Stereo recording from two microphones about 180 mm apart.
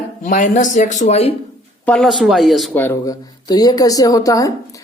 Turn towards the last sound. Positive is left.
turn(degrees=20)  # may be behind; listen again after turning